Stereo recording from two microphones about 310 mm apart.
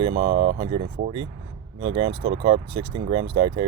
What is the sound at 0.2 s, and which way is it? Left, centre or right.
Speech, centre.